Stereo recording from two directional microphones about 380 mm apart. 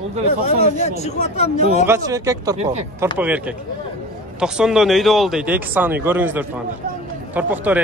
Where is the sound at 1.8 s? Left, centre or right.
Centre.